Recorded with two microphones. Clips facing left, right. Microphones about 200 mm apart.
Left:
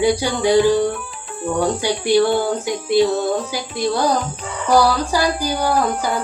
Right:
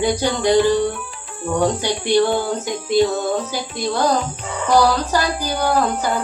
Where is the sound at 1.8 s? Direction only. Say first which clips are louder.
Left 1 dB; 10° left (ahead or behind).